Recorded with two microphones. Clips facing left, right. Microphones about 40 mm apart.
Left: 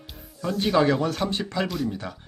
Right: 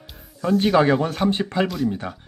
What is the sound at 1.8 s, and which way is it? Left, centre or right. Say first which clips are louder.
Speech: right 5 dB; centre.